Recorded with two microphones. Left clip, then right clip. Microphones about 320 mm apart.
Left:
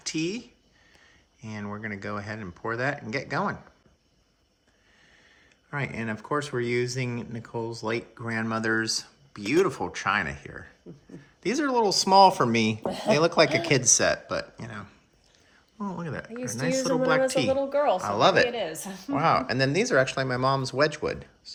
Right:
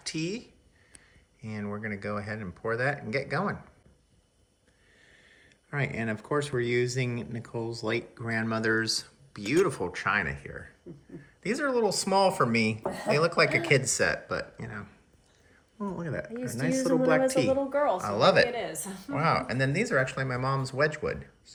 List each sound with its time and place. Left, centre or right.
0.0 s speech: centre
5.7 s speech: centre
17.5 s a woman's voice: left
17.9 s speech: centre
18.6 s a woman's voice: left
19.1 s speech: centre